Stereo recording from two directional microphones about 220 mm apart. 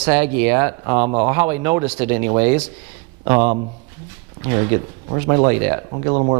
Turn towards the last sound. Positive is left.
turn(degrees=-25)  # may be behind; listen again after turning